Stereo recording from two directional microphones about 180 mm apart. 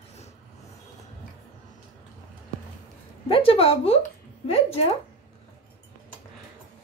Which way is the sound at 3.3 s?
30° left (ahead or behind).